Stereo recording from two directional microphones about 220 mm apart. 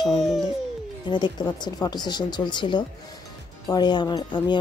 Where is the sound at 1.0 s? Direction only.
20° left (ahead or behind).